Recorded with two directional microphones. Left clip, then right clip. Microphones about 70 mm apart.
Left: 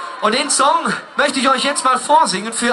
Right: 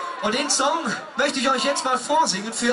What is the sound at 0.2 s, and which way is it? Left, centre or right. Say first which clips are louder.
A man's voice: left 7 dB; centre.